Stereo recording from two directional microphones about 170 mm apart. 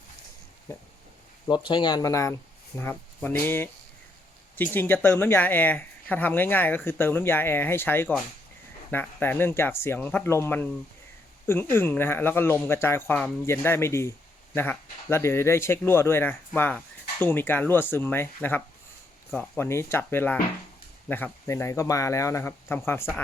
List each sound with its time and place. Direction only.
1.5 s speech: 25° left (ahead or behind)